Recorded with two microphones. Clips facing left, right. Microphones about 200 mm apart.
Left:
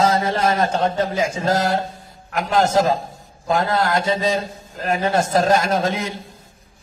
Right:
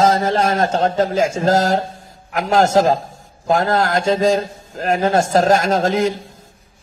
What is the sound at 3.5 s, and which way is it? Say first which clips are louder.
A man's voice: right 3 dB; 45° right (ahead or behind).